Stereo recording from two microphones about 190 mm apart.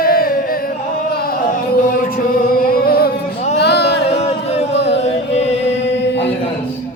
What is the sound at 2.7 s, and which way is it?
Music, 55° left (ahead or behind).